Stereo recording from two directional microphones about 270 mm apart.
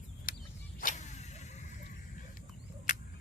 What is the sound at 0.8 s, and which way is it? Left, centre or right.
Vehicle, left.